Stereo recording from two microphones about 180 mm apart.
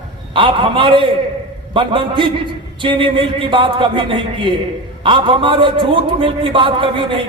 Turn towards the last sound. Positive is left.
turn(degrees=-30)  # may be behind; listen again after turning